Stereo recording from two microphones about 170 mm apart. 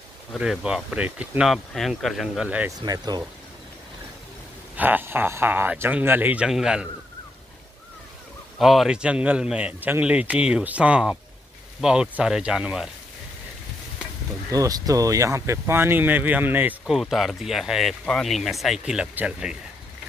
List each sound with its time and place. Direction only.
0.3 s speech: 5° right (ahead or behind)
2.8 s speech: 25° right (ahead or behind)
4.7 s a man's voice: 10° right (ahead or behind)
8.5 s a man's voice: centre (ahead or behind)
14.5 s speech: 20° right (ahead or behind); by 19.6 s 5° right (ahead or behind)